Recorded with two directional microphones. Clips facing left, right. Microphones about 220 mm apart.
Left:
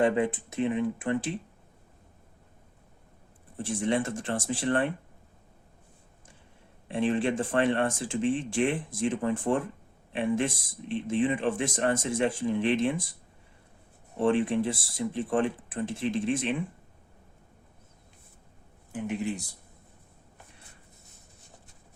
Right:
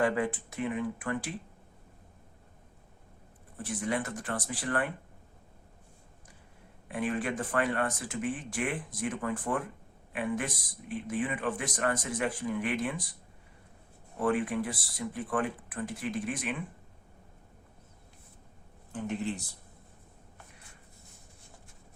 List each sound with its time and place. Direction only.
0.0 s speech: 20° left (ahead or behind)
3.6 s speech: 25° left (ahead or behind)
6.8 s speech: 25° left (ahead or behind)
14.2 s speech: 25° left (ahead or behind)
18.9 s speech: 10° left (ahead or behind)